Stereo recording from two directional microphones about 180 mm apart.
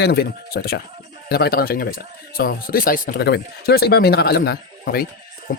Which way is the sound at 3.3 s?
60° left (ahead or behind).